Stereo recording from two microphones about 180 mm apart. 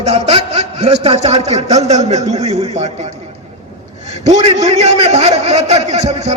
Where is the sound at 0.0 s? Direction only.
30° right (ahead or behind).